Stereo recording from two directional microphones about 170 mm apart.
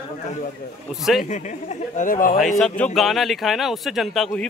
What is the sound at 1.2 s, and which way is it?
Speech, 45° left (ahead or behind).